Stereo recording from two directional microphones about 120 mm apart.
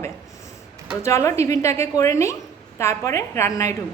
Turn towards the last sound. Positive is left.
turn(degrees=25)  # may be behind; listen again after turning